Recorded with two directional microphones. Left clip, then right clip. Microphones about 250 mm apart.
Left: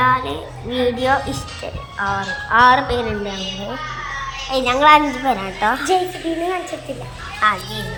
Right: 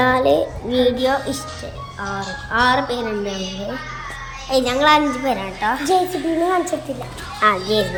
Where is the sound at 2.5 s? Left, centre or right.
Centre.